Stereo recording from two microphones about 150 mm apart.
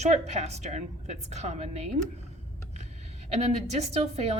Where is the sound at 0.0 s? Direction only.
45° right (ahead or behind).